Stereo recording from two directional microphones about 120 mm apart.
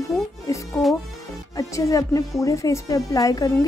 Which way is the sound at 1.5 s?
30° left (ahead or behind).